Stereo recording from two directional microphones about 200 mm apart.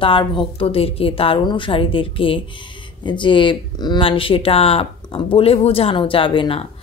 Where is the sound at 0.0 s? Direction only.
25° left (ahead or behind).